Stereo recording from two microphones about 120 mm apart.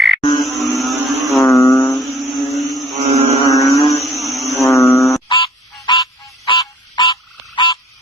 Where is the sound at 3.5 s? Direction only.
30° left (ahead or behind).